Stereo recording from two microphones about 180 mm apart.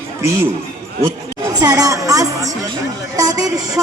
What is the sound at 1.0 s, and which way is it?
Chatter, 20° right (ahead or behind).